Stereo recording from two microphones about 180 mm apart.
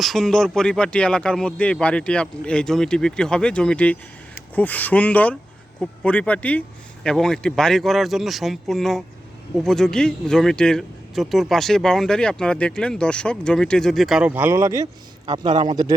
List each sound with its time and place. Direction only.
0.0 s speech: centre (ahead or behind)
15.3 s speech: 25° right (ahead or behind)